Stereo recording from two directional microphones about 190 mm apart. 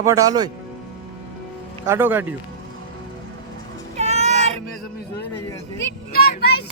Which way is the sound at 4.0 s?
35° right (ahead or behind).